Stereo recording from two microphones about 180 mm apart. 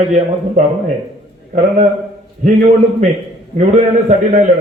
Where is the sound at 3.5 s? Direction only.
40° right (ahead or behind).